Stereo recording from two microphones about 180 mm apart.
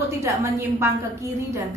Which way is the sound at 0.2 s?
15° right (ahead or behind).